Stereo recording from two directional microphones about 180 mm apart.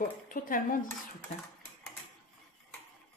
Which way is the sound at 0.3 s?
50° left (ahead or behind).